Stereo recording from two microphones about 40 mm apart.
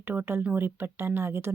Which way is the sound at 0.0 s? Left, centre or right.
Right.